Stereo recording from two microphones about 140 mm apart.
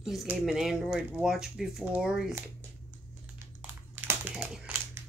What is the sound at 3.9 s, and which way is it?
Crumpling, 10° right (ahead or behind).